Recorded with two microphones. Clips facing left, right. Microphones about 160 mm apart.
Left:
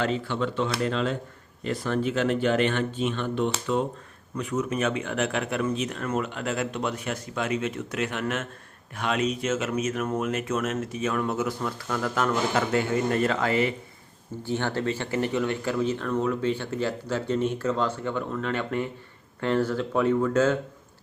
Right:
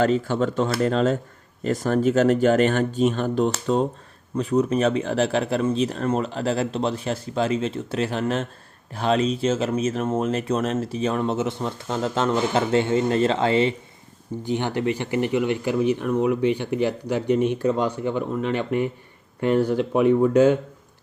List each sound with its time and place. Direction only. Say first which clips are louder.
0.0 s speech: right 6 dB; 45° right (ahead or behind); by 13.7 s 25° right (ahead or behind)
14.4 s speech: right 3 dB; 15° right (ahead or behind)